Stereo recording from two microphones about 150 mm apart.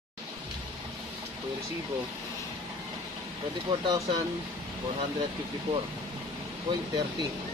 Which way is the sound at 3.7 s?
30° right (ahead or behind).